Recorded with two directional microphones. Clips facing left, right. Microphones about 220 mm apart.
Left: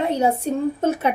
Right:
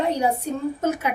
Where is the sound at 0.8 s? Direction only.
30° left (ahead or behind).